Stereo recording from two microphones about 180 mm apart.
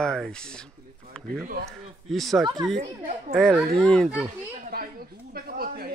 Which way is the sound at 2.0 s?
Centre (ahead or behind).